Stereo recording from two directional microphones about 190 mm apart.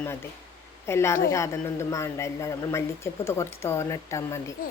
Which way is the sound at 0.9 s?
15° left (ahead or behind).